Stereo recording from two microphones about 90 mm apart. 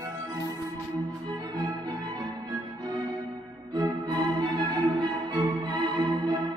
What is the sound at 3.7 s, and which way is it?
Music, 55° right (ahead or behind).